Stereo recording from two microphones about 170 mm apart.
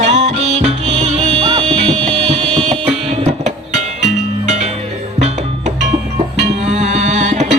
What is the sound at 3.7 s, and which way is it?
Music, 45° right (ahead or behind).